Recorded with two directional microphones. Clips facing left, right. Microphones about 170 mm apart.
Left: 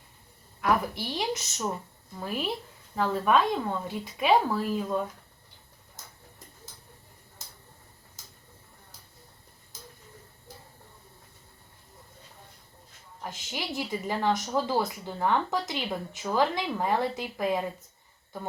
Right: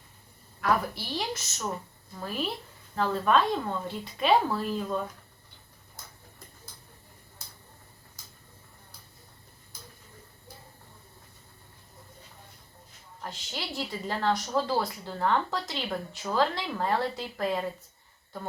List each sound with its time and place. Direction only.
0.6 s a woman's voice: 20° left (ahead or behind)
13.2 s a woman's voice: 15° left (ahead or behind)